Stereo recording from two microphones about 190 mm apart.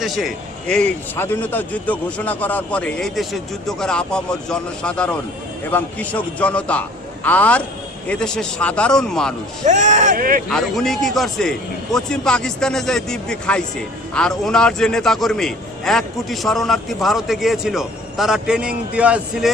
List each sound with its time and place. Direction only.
0.0 s a man's voice: centre (ahead or behind)
9.6 s speech: 40° right (ahead or behind)
10.5 s a man's voice: centre (ahead or behind)